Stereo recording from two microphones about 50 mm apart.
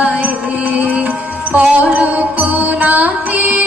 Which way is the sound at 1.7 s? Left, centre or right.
Right.